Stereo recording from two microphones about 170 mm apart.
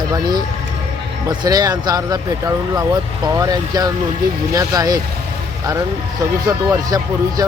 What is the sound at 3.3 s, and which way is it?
Speech, 20° right (ahead or behind).